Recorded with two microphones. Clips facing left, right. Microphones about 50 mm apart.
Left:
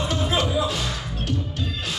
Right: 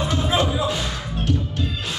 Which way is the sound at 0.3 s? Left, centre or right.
Right.